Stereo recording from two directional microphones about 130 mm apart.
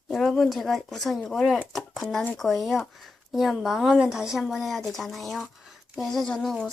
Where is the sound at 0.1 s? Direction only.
Centre (ahead or behind).